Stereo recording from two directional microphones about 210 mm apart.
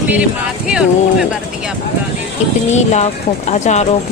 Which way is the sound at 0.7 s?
5° right (ahead or behind).